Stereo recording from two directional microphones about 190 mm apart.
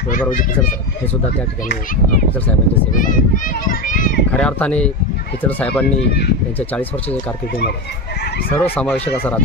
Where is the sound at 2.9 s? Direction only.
45° left (ahead or behind).